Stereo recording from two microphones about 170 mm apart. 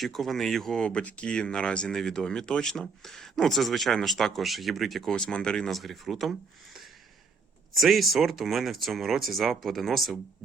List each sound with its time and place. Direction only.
0.0 s speech: centre (ahead or behind)
7.8 s speech: centre (ahead or behind)